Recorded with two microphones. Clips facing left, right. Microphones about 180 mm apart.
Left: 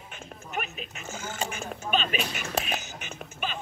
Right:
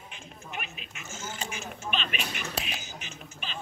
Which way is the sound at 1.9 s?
40° left (ahead or behind).